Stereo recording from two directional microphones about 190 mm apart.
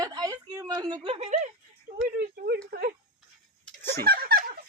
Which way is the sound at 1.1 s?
35° right (ahead or behind).